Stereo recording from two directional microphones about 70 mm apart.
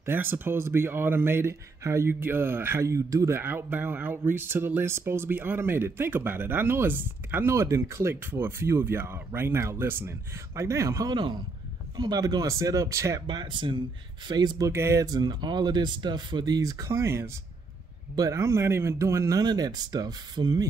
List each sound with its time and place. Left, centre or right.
0.0 s speech: right
3.3 s speech: right
11.1 s speech: right
12.0 s speech: right
13.3 s speech: right
14.7 s speech: right
15.0 s speech: right
18.3 s speech: right
19.4 s speech: right